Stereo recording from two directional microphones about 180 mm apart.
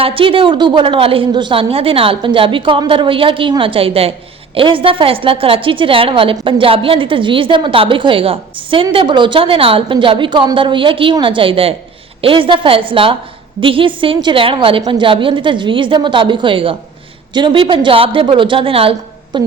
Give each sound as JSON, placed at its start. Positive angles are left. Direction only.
{"t": 0.0, "sound": "a woman's voice", "side_deg": -30}